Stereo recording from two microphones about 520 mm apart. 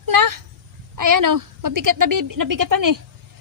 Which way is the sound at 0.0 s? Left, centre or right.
Right.